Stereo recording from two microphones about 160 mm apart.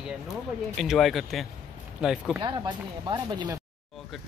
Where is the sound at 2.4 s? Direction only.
30° right (ahead or behind).